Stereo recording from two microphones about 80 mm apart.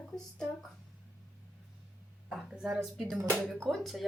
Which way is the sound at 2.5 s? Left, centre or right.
Centre.